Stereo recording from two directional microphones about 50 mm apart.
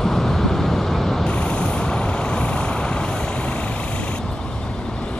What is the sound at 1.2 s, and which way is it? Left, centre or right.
Vehicle, left.